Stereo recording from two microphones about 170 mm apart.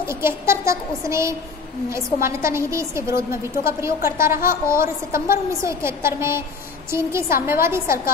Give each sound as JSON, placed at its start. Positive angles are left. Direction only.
{"t": 0.0, "sound": "a woman's voice", "side_deg": -15}